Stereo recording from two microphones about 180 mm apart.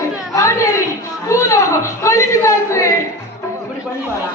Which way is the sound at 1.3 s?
15° left (ahead or behind).